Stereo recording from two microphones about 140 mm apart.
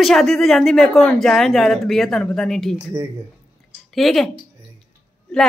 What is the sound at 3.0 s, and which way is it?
Speech, 25° right (ahead or behind).